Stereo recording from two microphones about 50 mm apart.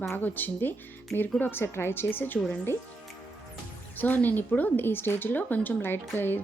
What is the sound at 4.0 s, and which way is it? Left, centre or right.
A woman's voice, left.